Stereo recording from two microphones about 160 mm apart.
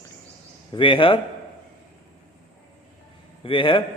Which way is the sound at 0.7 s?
30° left (ahead or behind).